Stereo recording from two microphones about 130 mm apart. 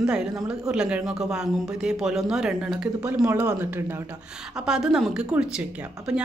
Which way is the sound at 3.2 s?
15° right (ahead or behind).